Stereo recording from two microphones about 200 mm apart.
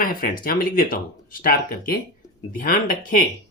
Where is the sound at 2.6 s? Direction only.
45° left (ahead or behind).